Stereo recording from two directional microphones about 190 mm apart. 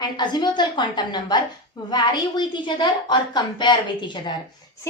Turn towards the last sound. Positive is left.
turn(degrees=25)  # may be behind; listen again after turning